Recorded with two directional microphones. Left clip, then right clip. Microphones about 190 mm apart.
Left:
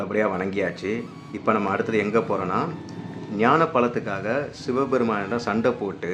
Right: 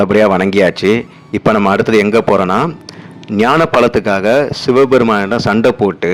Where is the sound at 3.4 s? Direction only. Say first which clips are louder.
Right 10 dB; 65° right (ahead or behind).